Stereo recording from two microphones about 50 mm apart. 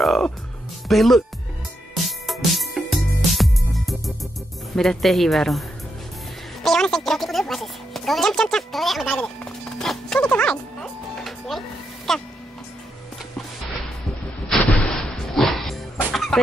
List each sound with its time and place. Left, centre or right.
0.8 s speech: centre
2.0 s music: centre
4.7 s speech: centre
6.6 s music: centre
9.0 s music: centre
10.2 s music: left
11.2 s music: centre
14.5 s music: centre